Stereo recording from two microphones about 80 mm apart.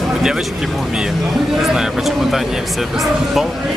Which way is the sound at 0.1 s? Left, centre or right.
Centre.